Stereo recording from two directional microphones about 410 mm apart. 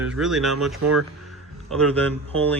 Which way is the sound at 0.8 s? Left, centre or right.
Right.